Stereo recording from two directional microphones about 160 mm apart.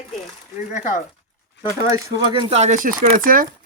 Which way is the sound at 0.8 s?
50° left (ahead or behind).